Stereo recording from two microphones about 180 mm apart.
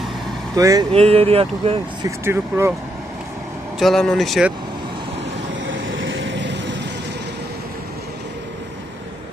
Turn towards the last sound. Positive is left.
turn(degrees=-75)  # may be behind; listen again after turning